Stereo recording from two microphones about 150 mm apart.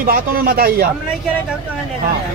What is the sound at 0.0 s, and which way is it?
Speech, 80° right.